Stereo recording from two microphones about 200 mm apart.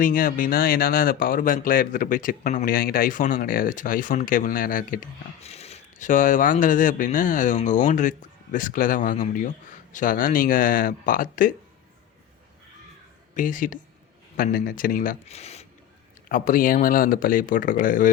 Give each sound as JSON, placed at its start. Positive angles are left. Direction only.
{"t": 0.0, "sound": "speech", "side_deg": 40}
{"t": 13.3, "sound": "speech", "side_deg": 40}
{"t": 16.3, "sound": "speech", "side_deg": 45}